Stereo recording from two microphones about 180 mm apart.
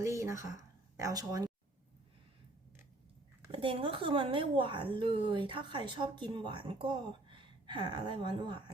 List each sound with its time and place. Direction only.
0.0 s a sound: 15° right (ahead or behind)
0.9 s a woman's voice: 20° right (ahead or behind)
3.5 s a woman's voice: 30° right (ahead or behind)